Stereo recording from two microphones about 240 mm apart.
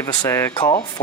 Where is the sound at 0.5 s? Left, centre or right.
Left.